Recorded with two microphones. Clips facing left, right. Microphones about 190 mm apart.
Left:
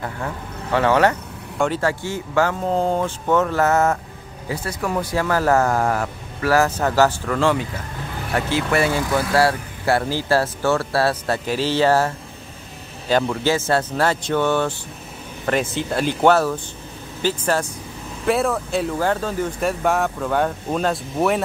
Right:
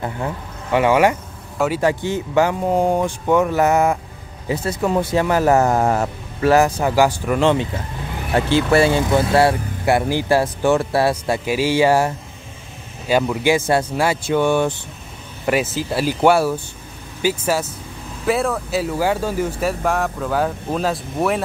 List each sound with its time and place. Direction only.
0.0 s speech: 15° right (ahead or behind)
13.1 s speech: 10° right (ahead or behind)